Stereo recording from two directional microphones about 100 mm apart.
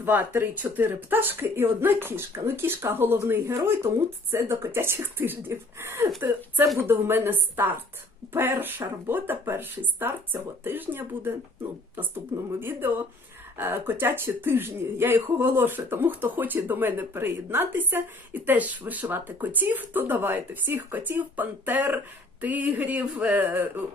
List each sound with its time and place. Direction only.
0.0 s speech: 20° right (ahead or behind)
12.5 s speech: 20° right (ahead or behind)